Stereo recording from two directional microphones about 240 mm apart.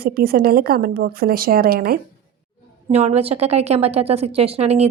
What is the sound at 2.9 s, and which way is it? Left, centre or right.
A woman's voice, right.